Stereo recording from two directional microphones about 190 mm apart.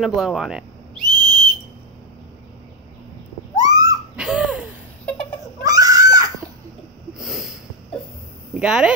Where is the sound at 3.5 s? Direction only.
20° right (ahead or behind).